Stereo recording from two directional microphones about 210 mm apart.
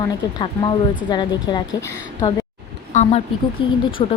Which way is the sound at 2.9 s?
30° left (ahead or behind).